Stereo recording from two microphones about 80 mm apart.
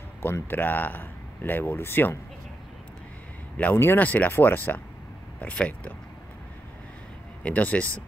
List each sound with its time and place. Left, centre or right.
0.2 s speech: left
3.5 s speech: centre
7.4 s speech: centre